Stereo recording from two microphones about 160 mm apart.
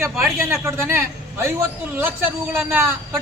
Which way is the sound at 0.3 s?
15° right (ahead or behind).